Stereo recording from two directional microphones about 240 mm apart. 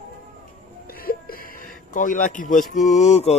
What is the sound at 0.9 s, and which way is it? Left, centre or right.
Speech, left.